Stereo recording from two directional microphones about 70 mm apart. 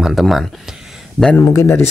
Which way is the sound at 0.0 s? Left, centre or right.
Centre.